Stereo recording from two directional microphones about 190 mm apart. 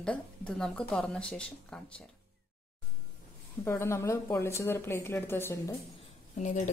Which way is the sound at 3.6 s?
15° left (ahead or behind).